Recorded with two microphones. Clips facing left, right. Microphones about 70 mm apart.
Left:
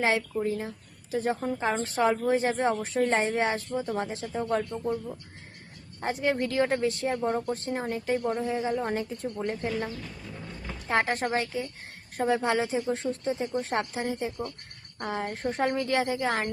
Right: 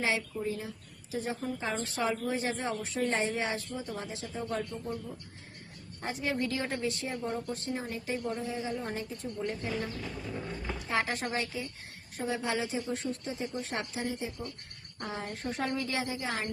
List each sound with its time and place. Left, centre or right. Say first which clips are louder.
0.0 s a woman's voice: left 5 dB; left
6.0 s speech: left 5 dB; left
7.5 s a woman's voice: left 5 dB; left